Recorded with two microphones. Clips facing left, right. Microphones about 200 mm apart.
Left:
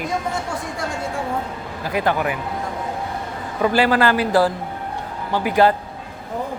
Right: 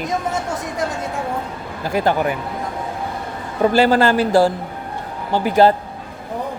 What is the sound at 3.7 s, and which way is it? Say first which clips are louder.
A man's voice: right 3 dB; 25° right (ahead or behind).